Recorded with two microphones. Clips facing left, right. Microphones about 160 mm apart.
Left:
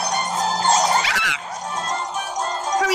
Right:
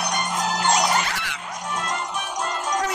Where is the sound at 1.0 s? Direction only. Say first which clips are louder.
Left 3 dB; 90° left.